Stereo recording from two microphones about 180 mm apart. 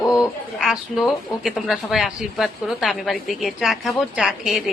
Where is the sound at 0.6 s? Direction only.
Centre (ahead or behind).